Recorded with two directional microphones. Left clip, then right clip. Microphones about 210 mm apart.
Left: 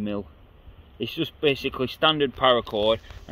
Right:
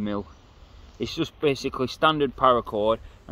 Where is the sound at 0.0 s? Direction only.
15° right (ahead or behind).